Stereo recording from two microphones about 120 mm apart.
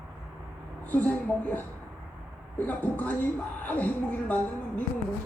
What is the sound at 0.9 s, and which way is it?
A man's voice, 15° left (ahead or behind).